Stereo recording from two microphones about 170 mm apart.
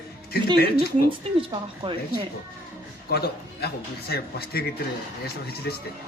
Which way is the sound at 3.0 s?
65° left (ahead or behind).